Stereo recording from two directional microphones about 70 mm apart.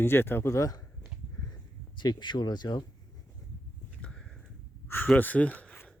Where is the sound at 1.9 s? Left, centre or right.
Left.